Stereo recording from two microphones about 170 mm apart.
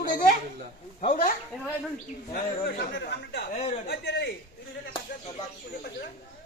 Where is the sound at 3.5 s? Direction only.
40° left (ahead or behind).